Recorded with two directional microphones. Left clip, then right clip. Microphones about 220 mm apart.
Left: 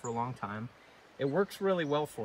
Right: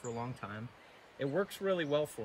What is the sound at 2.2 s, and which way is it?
Speech, 15° left (ahead or behind).